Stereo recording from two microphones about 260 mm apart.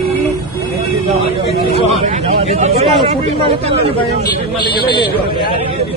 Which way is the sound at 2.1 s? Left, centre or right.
Right.